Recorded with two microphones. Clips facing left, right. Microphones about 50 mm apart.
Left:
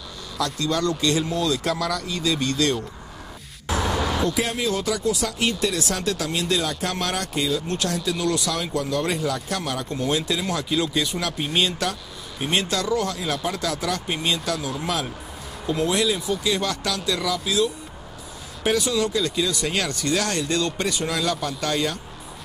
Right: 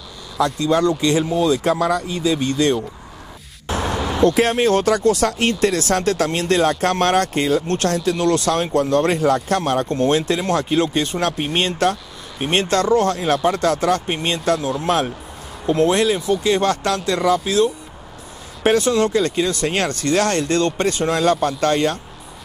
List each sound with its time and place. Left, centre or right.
0.4 s speech: right
3.6 s a sound: right
3.9 s vehicle: centre
4.2 s speech: right